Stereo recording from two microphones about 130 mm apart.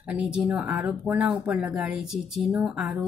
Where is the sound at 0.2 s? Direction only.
10° right (ahead or behind).